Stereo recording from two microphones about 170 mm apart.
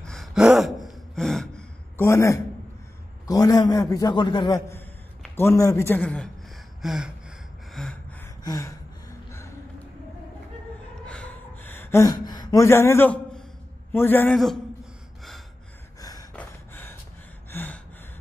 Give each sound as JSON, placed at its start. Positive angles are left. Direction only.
{"t": 0.0, "sound": "gasp", "side_deg": 0}
{"t": 2.0, "sound": "a man's voice", "side_deg": 15}
{"t": 6.8, "sound": "gasp", "side_deg": -5}
{"t": 8.5, "sound": "a man's voice", "side_deg": 20}
{"t": 11.1, "sound": "a sound", "side_deg": 10}
{"t": 13.9, "sound": "a man's voice", "side_deg": 10}
{"t": 14.3, "sound": "a man's voice", "side_deg": 0}
{"t": 16.0, "sound": "a sound", "side_deg": 20}
{"t": 16.3, "sound": "gasp", "side_deg": 10}